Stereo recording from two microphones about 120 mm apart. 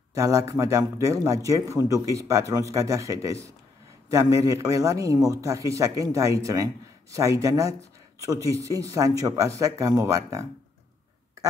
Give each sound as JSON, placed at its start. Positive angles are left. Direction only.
{"t": 0.1, "sound": "a man's voice", "side_deg": -25}